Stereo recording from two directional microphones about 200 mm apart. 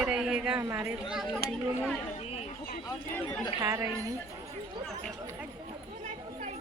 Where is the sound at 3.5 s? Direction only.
15° right (ahead or behind).